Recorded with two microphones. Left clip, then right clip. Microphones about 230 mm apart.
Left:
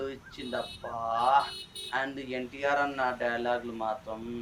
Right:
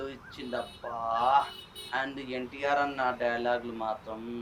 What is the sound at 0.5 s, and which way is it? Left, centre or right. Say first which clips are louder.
Speech: even; right.